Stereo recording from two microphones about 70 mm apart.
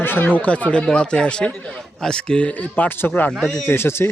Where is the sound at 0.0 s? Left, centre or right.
Left.